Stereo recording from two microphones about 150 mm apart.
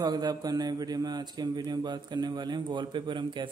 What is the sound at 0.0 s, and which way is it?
A man's voice, 30° right (ahead or behind).